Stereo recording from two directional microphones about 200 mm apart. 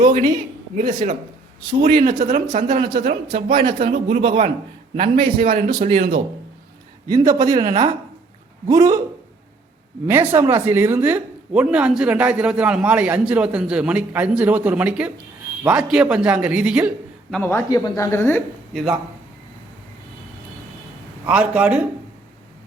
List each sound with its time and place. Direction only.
0.8 s speech: 45° right (ahead or behind)
3.2 s speech: 25° right (ahead or behind)
3.8 s speech: 45° right (ahead or behind)
4.9 s speech: 25° right (ahead or behind)
5.8 s speech: 40° right (ahead or behind)
7.1 s speech: 20° right (ahead or behind)
10.1 s speech: 10° right (ahead or behind)
17.3 s speech: 10° left (ahead or behind)
21.2 s speech: 5° right (ahead or behind)